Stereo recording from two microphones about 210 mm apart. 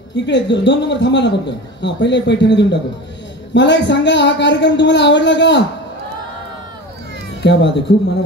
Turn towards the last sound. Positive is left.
turn(degrees=55)  # may be behind; listen again after turning